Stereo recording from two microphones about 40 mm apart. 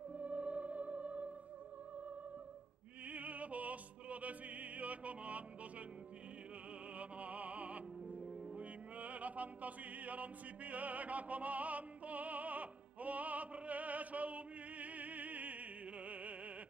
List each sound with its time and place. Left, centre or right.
0.1 s music: right
3.1 s opera: right
7.0 s music: right
16.1 s opera: right